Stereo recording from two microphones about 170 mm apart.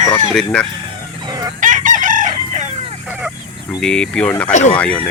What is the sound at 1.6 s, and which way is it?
Chicken, 50° right (ahead or behind).